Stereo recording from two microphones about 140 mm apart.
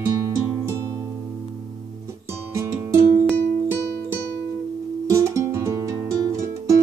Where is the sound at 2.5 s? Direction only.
25° right (ahead or behind).